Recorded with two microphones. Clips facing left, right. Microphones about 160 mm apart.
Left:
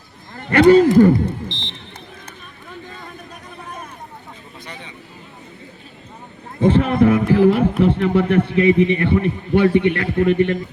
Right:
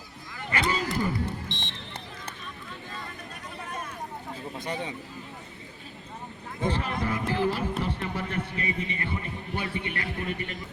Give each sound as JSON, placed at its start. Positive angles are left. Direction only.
{"t": 0.3, "sound": "speech", "side_deg": 60}
{"t": 4.6, "sound": "vehicle", "side_deg": -45}
{"t": 6.6, "sound": "a sound", "side_deg": 60}
{"t": 9.0, "sound": "a man's voice", "side_deg": 70}